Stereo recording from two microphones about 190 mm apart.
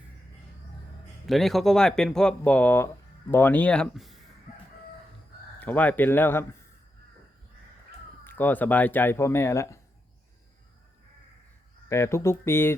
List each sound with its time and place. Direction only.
1.3 s speech: centre (ahead or behind)
4.5 s crowing: 40° left (ahead or behind)
5.5 s speech: 10° left (ahead or behind)
8.2 s speech: 10° left (ahead or behind)
11.9 s speech: 15° left (ahead or behind)